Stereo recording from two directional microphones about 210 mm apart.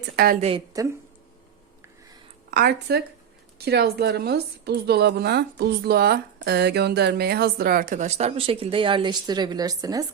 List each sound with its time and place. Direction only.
0.2 s a woman's voice: 50° right (ahead or behind)
0.7 s speech: 15° right (ahead or behind)
2.5 s a woman's voice: 45° right (ahead or behind); by 10.1 s 15° right (ahead or behind)